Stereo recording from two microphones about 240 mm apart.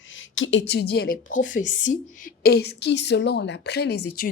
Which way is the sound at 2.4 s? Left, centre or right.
Left.